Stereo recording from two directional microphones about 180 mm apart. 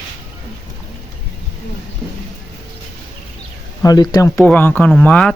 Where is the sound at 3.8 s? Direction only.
20° left (ahead or behind).